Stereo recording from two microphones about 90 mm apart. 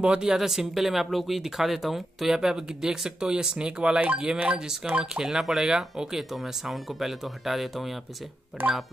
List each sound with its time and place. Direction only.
0.0 s speech: 10° right (ahead or behind)
8.6 s speech: 20° right (ahead or behind)